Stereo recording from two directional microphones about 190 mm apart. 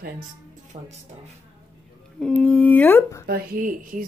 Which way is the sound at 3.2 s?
50° right (ahead or behind).